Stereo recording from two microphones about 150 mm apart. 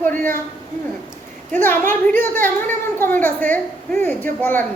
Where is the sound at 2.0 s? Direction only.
15° left (ahead or behind).